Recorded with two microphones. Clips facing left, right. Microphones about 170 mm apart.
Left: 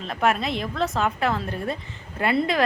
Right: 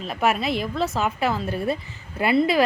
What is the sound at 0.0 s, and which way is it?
A woman's voice, 5° right (ahead or behind).